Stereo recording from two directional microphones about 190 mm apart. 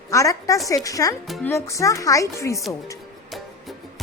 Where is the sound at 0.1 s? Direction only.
15° left (ahead or behind).